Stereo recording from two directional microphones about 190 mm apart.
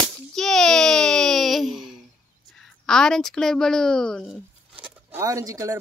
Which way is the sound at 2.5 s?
5° left (ahead or behind).